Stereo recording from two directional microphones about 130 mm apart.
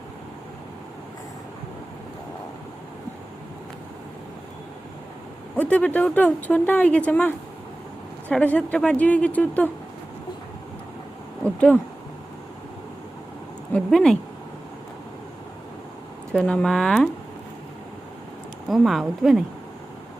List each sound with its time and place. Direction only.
5.5 s speech: 10° left (ahead or behind)
11.4 s speech: 10° left (ahead or behind)
13.7 s speech: 5° left (ahead or behind)
16.3 s speech: 5° left (ahead or behind)
18.7 s speech: centre (ahead or behind)